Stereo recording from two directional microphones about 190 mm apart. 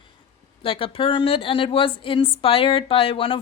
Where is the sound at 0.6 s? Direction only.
30° left (ahead or behind).